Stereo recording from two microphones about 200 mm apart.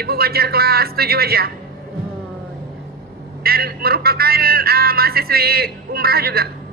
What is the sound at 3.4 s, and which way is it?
Speech, 50° right (ahead or behind).